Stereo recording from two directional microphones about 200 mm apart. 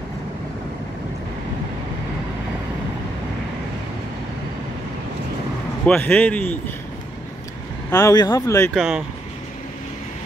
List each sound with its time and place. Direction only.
5.9 s speech: 5° left (ahead or behind)
7.9 s speech: 20° left (ahead or behind)
8.7 s speech: centre (ahead or behind)